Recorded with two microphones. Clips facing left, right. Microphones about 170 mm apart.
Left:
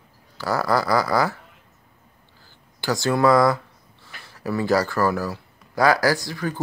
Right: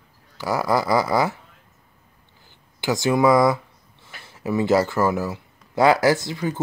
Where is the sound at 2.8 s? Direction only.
20° right (ahead or behind).